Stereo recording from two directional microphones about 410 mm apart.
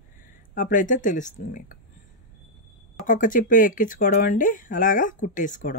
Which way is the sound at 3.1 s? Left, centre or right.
Centre.